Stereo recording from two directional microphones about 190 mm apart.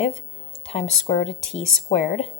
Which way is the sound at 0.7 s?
35° left (ahead or behind).